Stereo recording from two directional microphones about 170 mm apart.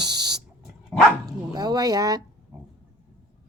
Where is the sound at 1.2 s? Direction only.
25° right (ahead or behind).